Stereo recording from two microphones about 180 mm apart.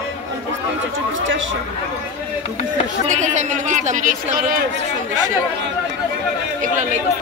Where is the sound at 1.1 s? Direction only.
90° right.